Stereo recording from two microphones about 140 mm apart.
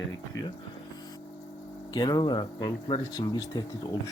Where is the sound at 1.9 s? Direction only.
30° left (ahead or behind).